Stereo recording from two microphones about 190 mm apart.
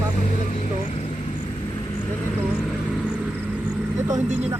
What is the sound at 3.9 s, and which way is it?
Speech, 15° right (ahead or behind).